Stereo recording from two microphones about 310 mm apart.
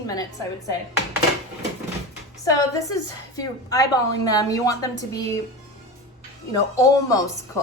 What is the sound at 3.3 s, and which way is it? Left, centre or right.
A woman's voice, centre.